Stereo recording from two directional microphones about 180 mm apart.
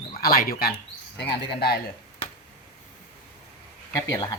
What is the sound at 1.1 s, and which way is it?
Speech, 65° left (ahead or behind).